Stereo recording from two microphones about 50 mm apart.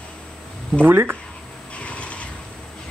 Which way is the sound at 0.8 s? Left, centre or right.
Right.